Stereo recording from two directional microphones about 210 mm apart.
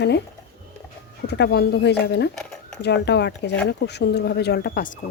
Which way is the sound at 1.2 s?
55° left (ahead or behind).